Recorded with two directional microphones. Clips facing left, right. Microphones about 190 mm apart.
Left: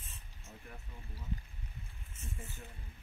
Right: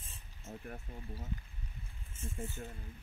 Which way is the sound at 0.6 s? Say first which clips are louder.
Right 6 dB; 50° right (ahead or behind).